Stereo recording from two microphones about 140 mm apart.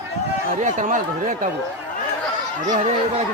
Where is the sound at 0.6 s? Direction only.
60° right (ahead or behind).